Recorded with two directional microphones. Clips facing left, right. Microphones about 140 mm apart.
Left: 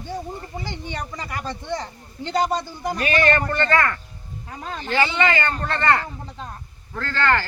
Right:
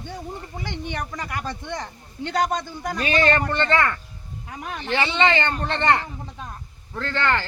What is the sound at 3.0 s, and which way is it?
Speech, 25° right (ahead or behind).